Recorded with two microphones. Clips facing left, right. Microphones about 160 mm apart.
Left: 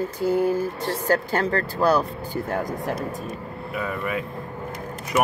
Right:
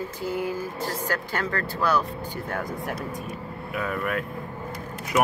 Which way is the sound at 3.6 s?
Centre (ahead or behind).